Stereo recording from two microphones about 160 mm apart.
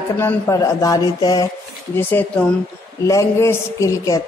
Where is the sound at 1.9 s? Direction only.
15° left (ahead or behind).